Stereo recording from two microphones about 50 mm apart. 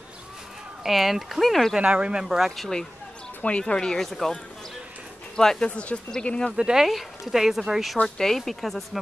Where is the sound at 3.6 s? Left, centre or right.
Centre.